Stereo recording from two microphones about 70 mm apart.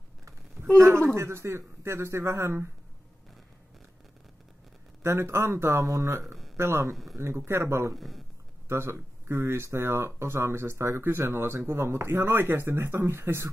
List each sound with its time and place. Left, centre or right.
0.7 s speech: right
5.0 s speech: right
7.9 s speech: centre
8.6 s speech: right